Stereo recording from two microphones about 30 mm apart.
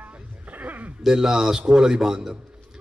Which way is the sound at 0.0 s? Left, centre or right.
Right.